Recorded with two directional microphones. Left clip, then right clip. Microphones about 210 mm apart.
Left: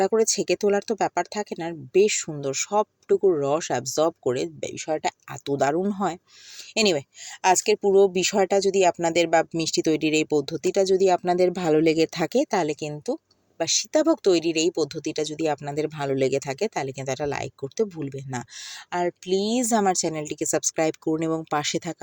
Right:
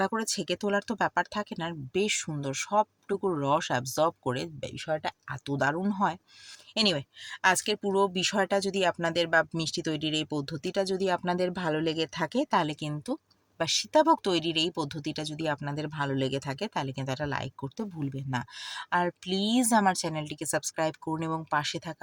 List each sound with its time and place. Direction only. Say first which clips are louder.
0.0 s speech: left 9 dB; 15° left (ahead or behind)